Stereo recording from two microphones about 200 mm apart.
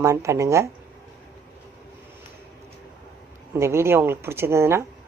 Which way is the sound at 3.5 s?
15° right (ahead or behind).